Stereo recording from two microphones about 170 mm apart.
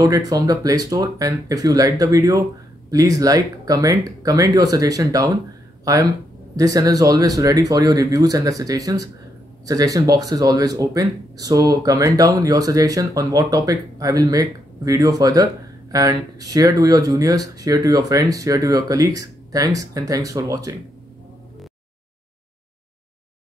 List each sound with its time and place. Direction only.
0.0 s speech: 20° right (ahead or behind)
6.5 s speech: 20° right (ahead or behind)